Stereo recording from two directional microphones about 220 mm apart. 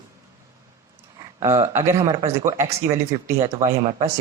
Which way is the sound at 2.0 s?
25° right (ahead or behind).